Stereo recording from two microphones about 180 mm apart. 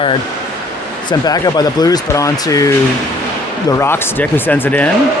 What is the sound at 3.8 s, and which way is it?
Speech, 10° left (ahead or behind).